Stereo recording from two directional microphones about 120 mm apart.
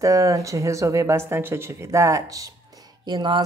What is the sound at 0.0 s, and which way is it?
Speech, 25° right (ahead or behind).